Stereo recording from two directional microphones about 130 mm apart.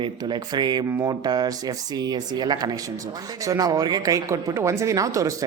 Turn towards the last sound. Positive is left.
turn(degrees=-25)  # may be behind; listen again after turning